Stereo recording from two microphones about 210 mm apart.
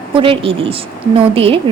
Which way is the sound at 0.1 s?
25° right (ahead or behind).